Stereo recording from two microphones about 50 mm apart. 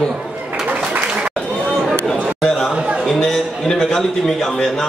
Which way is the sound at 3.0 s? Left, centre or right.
Centre.